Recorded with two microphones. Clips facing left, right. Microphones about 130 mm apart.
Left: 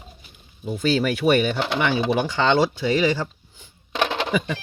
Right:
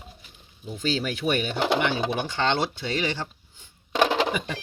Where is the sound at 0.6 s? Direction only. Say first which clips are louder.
Left 6 dB; 70° left (ahead or behind).